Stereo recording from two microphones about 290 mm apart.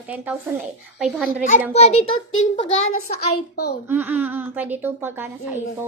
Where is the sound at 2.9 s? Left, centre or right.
Left.